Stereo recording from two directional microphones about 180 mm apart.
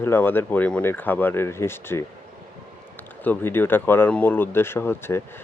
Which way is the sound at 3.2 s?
10° left (ahead or behind).